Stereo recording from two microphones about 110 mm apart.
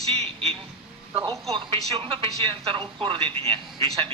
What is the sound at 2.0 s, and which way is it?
Speech, 50° right (ahead or behind).